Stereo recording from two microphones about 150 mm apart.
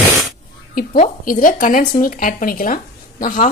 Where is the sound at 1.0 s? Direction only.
65° left (ahead or behind).